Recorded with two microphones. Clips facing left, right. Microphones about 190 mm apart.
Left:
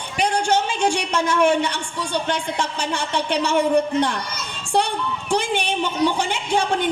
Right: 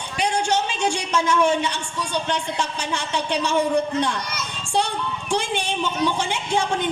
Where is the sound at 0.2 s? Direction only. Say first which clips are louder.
Left 2 dB; 60° left (ahead or behind).